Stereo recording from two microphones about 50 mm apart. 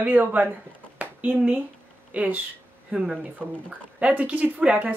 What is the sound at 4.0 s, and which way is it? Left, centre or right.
Speech, right.